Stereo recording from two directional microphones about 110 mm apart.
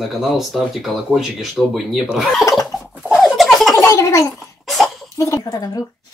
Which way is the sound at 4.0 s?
25° left (ahead or behind).